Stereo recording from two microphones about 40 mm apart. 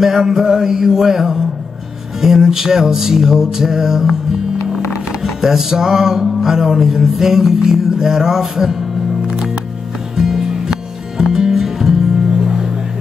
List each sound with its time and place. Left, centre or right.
0.0 s music: centre
5.2 s music: centre
10.1 s music: centre